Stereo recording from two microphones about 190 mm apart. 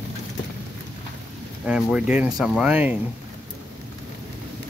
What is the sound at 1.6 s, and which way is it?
Speech, 5° right (ahead or behind).